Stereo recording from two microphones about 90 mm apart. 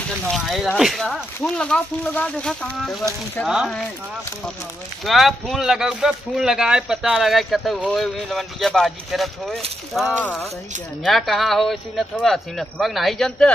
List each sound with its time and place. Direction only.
0.3 s speech: centre (ahead or behind)
3.4 s speech: 20° left (ahead or behind)
5.0 s speech: centre (ahead or behind)